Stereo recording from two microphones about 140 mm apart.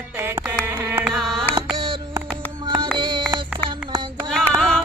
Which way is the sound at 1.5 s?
35° right (ahead or behind).